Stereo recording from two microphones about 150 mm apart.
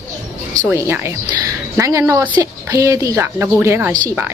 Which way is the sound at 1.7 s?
20° right (ahead or behind).